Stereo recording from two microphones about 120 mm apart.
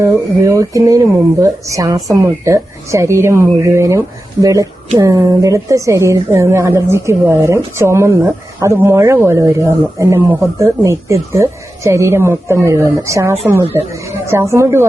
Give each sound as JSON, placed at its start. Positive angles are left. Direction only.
{"t": 0.0, "sound": "a woman's voice", "side_deg": -25}